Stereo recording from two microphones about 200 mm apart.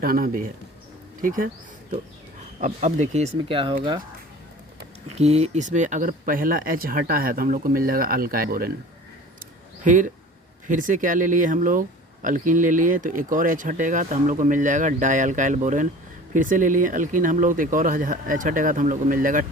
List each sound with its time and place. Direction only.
0.0 s speech: 45° right (ahead or behind)
2.6 s speech: 35° right (ahead or behind)
5.1 s speech: 35° right (ahead or behind)
9.8 s speech: 40° right (ahead or behind)